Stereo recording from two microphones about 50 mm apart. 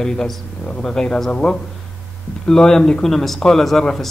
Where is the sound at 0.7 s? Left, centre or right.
Left.